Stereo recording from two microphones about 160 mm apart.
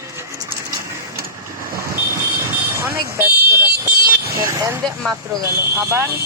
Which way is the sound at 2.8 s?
15° right (ahead or behind).